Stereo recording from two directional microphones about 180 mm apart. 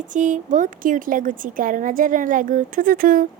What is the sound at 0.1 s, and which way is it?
A woman's voice, 45° right (ahead or behind).